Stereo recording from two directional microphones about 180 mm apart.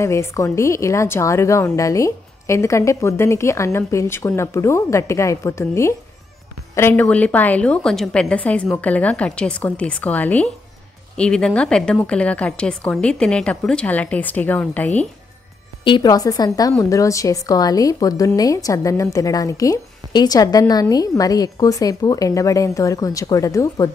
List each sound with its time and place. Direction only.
0.0 s a woman's voice: 15° left (ahead or behind)
15.8 s a woman's voice: 25° left (ahead or behind)